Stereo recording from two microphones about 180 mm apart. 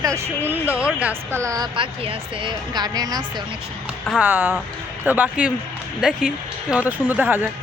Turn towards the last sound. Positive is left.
turn(degrees=-10)  # may be behind; listen again after turning